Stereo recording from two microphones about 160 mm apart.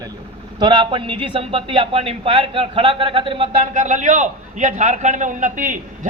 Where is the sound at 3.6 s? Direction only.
50° right (ahead or behind).